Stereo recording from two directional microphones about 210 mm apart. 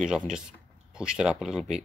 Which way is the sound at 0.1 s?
5° right (ahead or behind).